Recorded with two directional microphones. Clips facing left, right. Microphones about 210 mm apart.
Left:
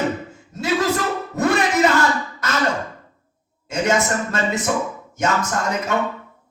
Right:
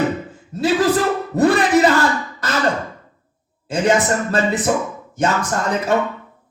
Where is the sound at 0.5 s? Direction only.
35° right (ahead or behind).